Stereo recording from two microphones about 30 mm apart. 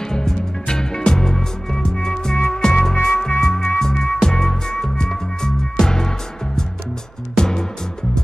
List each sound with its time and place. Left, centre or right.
0.0 s music: centre